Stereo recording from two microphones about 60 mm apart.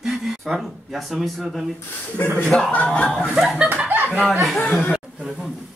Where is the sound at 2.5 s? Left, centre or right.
Centre.